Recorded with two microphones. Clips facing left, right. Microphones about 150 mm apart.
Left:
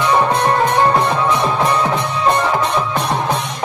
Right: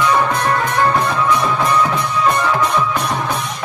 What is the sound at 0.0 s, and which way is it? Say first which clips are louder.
Music: left 1 dB; 25° left (ahead or behind).